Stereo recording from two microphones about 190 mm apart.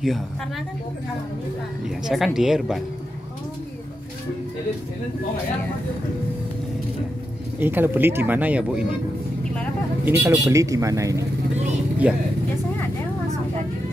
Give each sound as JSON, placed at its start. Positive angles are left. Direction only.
{"t": 2.0, "sound": "speech", "side_deg": 0}
{"t": 7.5, "sound": "speech", "side_deg": -10}
{"t": 10.0, "sound": "speech", "side_deg": -10}